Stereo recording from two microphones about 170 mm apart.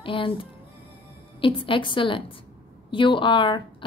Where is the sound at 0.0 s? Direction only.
30° left (ahead or behind).